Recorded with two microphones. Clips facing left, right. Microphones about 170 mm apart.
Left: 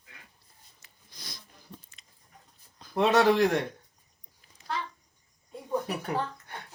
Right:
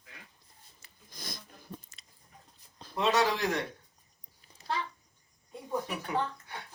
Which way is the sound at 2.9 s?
55° left (ahead or behind).